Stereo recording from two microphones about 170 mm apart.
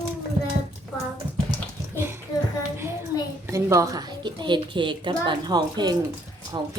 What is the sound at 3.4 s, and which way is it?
A woman's voice, 15° right (ahead or behind).